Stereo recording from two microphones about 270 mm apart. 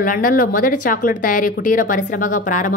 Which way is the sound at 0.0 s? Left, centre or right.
Left.